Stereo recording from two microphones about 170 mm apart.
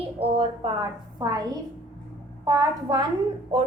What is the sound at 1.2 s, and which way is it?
Speech, 20° right (ahead or behind).